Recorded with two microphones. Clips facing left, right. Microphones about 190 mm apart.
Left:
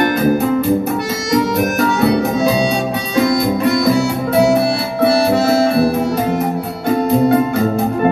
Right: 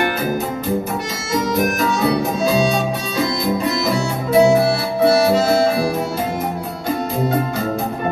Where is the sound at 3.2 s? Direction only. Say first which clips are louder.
Left 6 dB; 65° left (ahead or behind).